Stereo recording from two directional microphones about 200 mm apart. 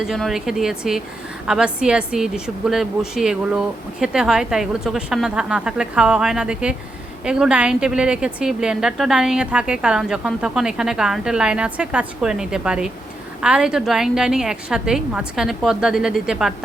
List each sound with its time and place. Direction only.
0.0 s a woman's voice: centre (ahead or behind)